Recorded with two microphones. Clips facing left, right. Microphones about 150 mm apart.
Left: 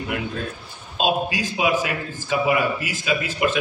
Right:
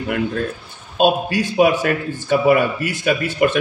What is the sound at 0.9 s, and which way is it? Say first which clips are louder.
A man's voice: right 6 dB; 55° right (ahead or behind).